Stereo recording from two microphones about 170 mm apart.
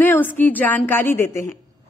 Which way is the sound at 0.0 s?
10° left (ahead or behind).